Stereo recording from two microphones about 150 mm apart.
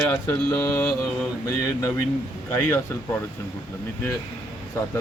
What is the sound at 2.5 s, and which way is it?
Speech, 15° left (ahead or behind).